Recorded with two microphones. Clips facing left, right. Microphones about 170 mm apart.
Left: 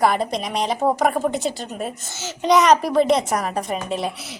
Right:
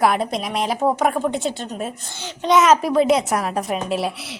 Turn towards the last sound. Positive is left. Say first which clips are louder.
# right 2 dB
turn(degrees=-5)  # may be behind; listen again after turning